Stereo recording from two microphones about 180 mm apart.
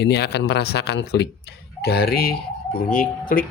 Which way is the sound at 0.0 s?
65° left (ahead or behind).